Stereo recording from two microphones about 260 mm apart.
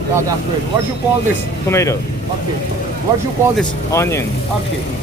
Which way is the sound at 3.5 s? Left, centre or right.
Centre.